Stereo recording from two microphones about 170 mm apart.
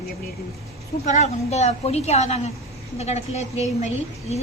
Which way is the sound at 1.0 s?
45° left (ahead or behind).